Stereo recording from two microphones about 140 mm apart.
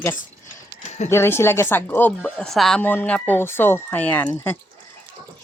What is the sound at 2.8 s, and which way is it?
Speech, 15° left (ahead or behind).